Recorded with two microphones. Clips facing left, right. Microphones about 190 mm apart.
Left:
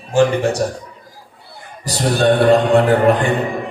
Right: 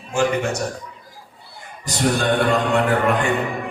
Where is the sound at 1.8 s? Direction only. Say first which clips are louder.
Left 4 dB; 35° left (ahead or behind).